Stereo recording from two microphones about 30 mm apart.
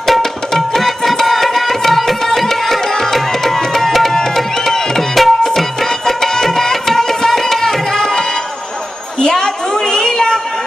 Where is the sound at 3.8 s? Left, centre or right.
Centre.